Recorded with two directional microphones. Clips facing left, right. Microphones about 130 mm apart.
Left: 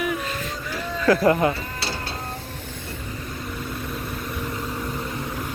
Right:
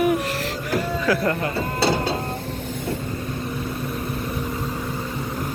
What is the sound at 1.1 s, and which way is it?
Speech, 10° right (ahead or behind).